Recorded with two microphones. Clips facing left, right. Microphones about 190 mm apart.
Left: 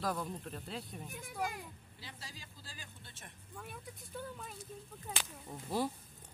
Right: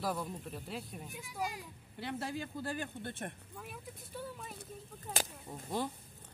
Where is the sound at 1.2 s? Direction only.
55° left (ahead or behind).